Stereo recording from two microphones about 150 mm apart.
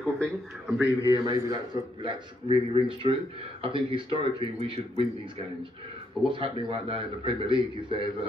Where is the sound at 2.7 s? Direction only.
35° right (ahead or behind).